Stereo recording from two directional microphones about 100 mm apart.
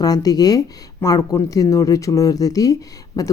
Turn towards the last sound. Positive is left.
turn(degrees=35)  # may be behind; listen again after turning